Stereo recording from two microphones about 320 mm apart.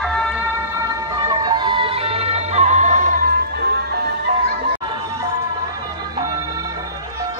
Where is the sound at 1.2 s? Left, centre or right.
Centre; by 4.1 s right.